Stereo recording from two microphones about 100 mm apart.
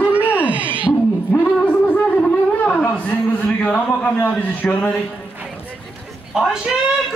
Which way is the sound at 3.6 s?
15° left (ahead or behind).